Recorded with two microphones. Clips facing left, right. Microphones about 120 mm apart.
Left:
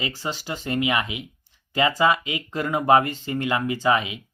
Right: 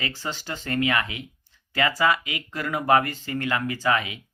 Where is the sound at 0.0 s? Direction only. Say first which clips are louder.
Left 2 dB; 15° left (ahead or behind).